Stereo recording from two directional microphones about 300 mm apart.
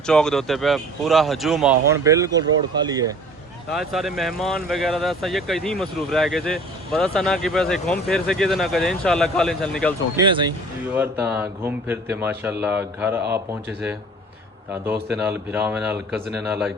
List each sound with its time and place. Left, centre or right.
0.0 s speech: centre
3.7 s speech: centre
10.2 s speech: centre
15.1 s speech: centre